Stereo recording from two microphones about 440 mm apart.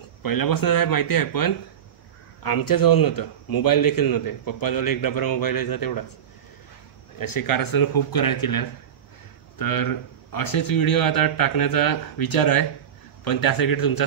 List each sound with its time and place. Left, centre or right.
0.2 s a man's voice: left
7.2 s a man's voice: left